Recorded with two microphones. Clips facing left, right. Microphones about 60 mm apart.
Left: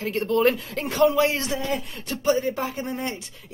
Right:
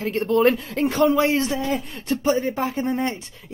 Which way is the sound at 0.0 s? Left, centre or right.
Right.